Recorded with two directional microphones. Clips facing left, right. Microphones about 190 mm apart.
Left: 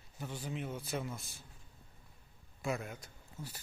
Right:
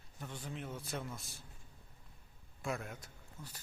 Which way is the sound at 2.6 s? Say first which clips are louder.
Left 3 dB; centre (ahead or behind).